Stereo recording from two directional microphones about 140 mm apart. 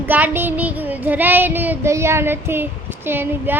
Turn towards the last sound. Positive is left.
turn(degrees=-15)  # may be behind; listen again after turning